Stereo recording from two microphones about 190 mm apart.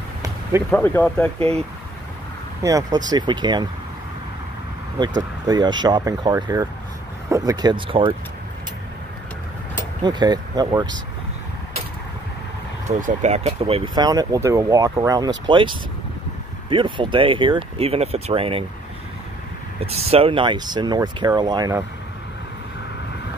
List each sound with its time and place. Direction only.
0.2 s basketball bounce: 15° right (ahead or behind)
0.7 s speech: 10° left (ahead or behind)
2.6 s speech: 15° right (ahead or behind)
5.5 s speech: 20° right (ahead or behind)
10.0 s speech: 20° right (ahead or behind)
13.0 s speech: 35° right (ahead or behind)
19.8 s speech: 30° right (ahead or behind)